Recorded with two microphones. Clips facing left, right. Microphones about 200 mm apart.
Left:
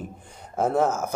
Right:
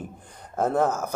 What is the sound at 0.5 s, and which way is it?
Speech, centre (ahead or behind).